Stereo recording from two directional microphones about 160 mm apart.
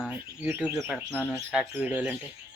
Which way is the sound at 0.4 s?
10° right (ahead or behind).